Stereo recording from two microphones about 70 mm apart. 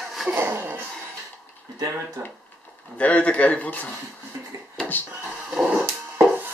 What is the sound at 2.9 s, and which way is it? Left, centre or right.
Speech, centre.